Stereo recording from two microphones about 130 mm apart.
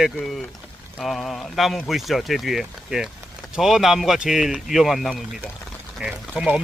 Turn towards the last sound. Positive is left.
turn(degrees=-5)  # may be behind; listen again after turning